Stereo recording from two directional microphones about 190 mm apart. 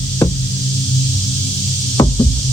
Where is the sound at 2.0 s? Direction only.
20° left (ahead or behind).